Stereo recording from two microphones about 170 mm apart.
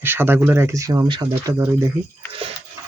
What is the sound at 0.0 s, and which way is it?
Speech, 10° right (ahead or behind).